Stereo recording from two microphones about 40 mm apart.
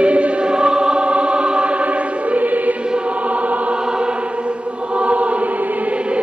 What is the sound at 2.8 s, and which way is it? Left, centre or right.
Choir, right.